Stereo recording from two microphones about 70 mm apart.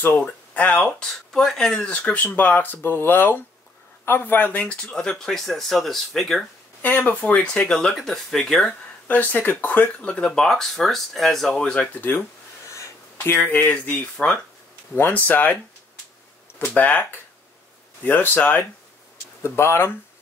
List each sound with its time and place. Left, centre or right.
0.0 s speech: left; by 1.9 s centre
1.9 s speech: left; by 6.4 s centre
6.8 s speech: left; by 8.7 s centre
9.0 s speech: left
10.1 s speech: centre
13.2 s speech: left
19.4 s speech: left